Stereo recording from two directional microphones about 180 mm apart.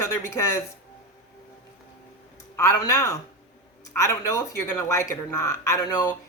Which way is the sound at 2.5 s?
15° left (ahead or behind).